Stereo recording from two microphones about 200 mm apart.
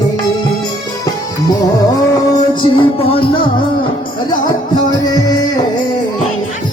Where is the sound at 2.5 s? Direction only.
25° left (ahead or behind).